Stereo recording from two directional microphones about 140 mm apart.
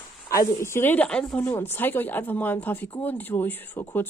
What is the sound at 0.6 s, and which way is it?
Speech, 15° left (ahead or behind).